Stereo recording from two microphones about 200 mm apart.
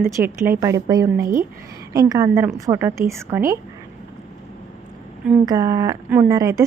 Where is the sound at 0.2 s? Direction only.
10° right (ahead or behind).